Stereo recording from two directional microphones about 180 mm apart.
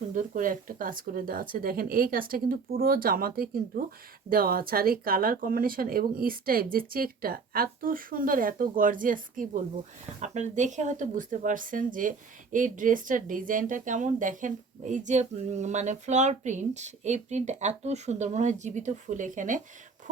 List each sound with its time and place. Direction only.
0.1 s speech: 45° right (ahead or behind)